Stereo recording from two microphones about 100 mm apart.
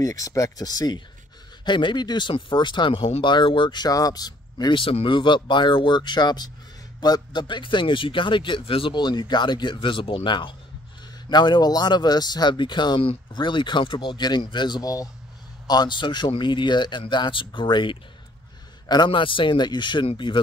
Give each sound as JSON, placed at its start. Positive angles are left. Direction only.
{"t": 0.0, "sound": "speech", "side_deg": 35}
{"t": 1.6, "sound": "speech", "side_deg": 50}
{"t": 4.7, "sound": "speech", "side_deg": 65}